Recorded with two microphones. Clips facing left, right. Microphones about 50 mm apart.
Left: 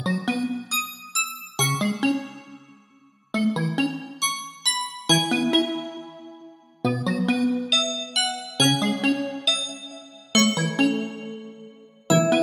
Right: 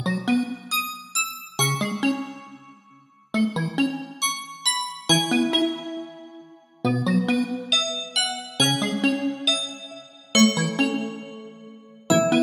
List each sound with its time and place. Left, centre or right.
0.0 s music: centre
3.3 s music: centre
6.8 s music: centre